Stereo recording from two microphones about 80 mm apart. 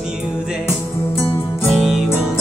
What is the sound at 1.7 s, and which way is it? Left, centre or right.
Music, centre.